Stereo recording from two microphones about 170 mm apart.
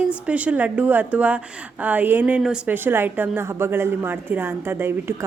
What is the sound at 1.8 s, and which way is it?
A woman's voice, 10° right (ahead or behind).